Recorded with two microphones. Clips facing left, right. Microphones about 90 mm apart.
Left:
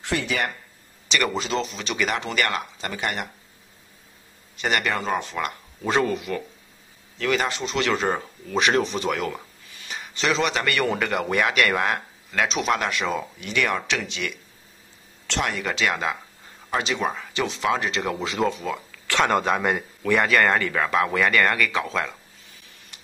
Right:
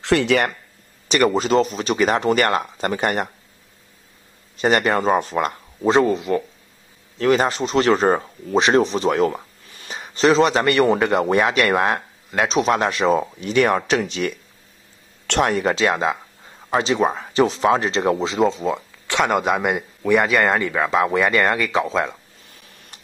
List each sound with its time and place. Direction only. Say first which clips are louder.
0.0 s speech: right 8 dB; 80° right
1.0 s a man's voice: right 7 dB; 40° right (ahead or behind)
4.6 s a man's voice: right 7 dB; 35° right (ahead or behind)
15.4 s a man's voice: right 6 dB; 35° right (ahead or behind)